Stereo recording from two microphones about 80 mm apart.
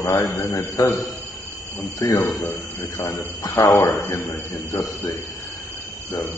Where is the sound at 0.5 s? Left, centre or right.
Left.